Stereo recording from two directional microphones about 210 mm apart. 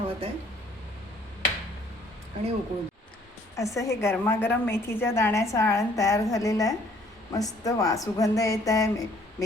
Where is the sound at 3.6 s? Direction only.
15° left (ahead or behind).